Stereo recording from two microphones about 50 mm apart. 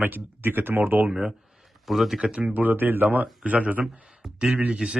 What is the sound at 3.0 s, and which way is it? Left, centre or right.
Speech, right.